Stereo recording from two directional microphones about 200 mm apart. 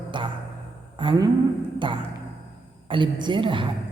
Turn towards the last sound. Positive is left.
turn(degrees=-25)  # may be behind; listen again after turning